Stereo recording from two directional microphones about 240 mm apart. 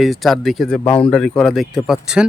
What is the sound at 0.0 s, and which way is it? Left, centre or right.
Speech, centre.